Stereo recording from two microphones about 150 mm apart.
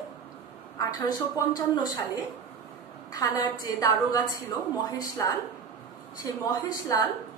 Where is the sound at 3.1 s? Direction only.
25° left (ahead or behind).